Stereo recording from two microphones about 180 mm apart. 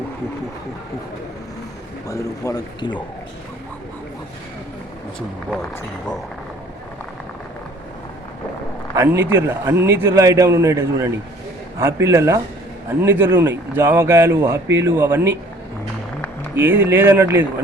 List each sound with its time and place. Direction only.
2.0 s speech: 15° left (ahead or behind)
9.0 s a man's voice: 10° right (ahead or behind)
16.6 s a man's voice: 10° right (ahead or behind)